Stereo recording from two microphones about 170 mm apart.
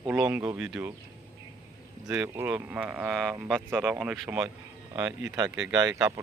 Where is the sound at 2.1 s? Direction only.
15° right (ahead or behind).